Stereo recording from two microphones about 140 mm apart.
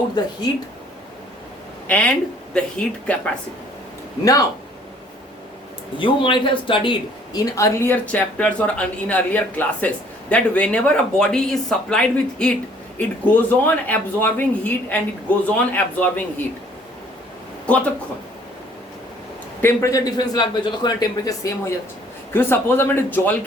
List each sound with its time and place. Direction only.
1.9 s speech: 10° left (ahead or behind)
4.2 s speech: 25° left (ahead or behind)
6.0 s speech: 35° left (ahead or behind)
7.5 s speech: 20° left (ahead or behind)
17.7 s speech: 10° left (ahead or behind)
19.6 s speech: 25° left (ahead or behind)
22.3 s speech: 15° left (ahead or behind)